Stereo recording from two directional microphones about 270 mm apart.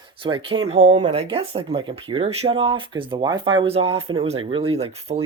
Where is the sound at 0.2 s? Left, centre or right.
Centre.